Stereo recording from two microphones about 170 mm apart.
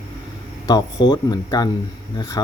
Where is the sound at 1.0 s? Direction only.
25° left (ahead or behind).